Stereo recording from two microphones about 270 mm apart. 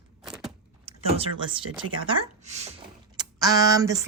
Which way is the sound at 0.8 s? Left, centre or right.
Right.